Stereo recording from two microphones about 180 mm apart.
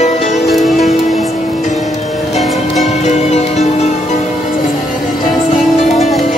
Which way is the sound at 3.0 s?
40° left (ahead or behind).